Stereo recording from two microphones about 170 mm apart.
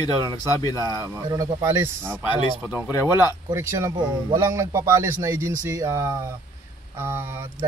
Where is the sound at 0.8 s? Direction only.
20° right (ahead or behind).